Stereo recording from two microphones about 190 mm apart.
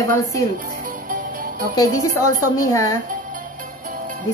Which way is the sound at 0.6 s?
45° right (ahead or behind).